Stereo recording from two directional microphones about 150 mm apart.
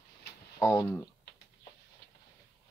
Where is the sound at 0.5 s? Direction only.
15° left (ahead or behind).